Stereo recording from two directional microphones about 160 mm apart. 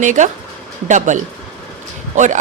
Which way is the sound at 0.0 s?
50° right (ahead or behind).